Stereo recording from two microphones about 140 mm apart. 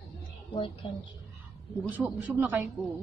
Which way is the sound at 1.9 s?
10° right (ahead or behind).